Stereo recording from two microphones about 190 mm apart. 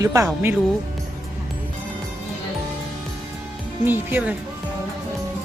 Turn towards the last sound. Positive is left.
turn(degrees=-10)  # may be behind; listen again after turning